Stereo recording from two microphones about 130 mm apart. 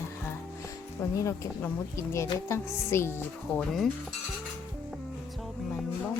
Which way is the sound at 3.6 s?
Centre (ahead or behind).